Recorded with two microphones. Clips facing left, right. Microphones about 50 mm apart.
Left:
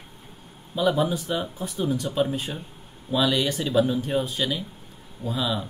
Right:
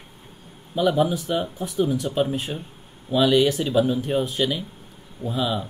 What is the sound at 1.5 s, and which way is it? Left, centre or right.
Speech, centre.